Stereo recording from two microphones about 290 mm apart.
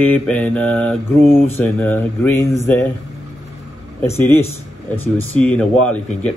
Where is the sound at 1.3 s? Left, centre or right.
Centre.